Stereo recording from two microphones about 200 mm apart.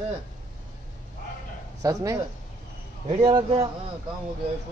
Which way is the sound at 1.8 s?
15° right (ahead or behind).